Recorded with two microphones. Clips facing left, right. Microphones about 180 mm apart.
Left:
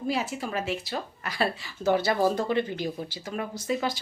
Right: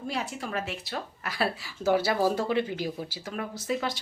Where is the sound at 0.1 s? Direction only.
5° left (ahead or behind).